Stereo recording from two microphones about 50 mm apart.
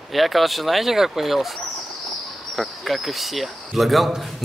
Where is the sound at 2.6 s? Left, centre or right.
Centre.